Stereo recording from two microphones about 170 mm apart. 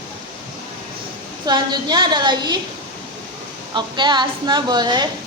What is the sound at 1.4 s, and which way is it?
A woman's voice, 25° right (ahead or behind).